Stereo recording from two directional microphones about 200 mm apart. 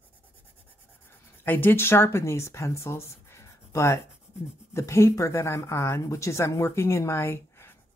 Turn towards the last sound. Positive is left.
turn(degrees=10)  # may be behind; listen again after turning